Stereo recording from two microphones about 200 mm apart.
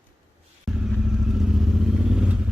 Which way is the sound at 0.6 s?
Centre (ahead or behind).